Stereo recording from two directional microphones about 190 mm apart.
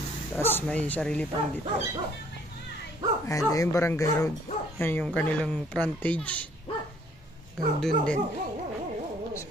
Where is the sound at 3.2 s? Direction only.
15° left (ahead or behind).